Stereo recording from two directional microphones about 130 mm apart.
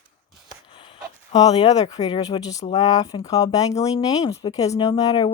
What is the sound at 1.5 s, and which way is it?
Speech, 30° left (ahead or behind).